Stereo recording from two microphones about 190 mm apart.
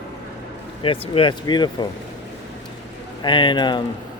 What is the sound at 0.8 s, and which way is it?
Speech, 30° left (ahead or behind).